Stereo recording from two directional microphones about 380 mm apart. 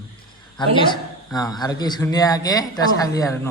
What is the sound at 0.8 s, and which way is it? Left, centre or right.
A man's voice, centre.